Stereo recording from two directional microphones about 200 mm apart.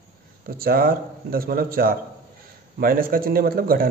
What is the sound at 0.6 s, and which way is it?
A man's voice, 45° right (ahead or behind).